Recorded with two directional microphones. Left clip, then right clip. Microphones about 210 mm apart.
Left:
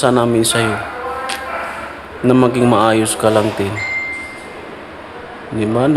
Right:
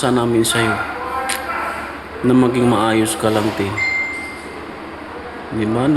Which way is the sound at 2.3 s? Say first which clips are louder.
Left 3 dB; 20° left (ahead or behind).